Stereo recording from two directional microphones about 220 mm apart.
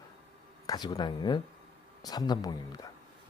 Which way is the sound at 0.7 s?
20° left (ahead or behind).